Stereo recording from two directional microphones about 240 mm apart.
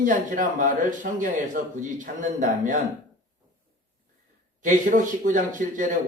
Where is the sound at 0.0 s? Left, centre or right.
Right.